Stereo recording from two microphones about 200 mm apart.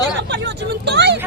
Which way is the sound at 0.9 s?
55° right (ahead or behind).